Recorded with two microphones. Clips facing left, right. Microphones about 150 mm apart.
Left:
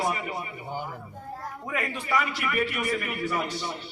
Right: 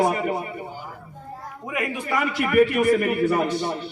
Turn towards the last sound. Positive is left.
turn(degrees=-50)  # may be behind; listen again after turning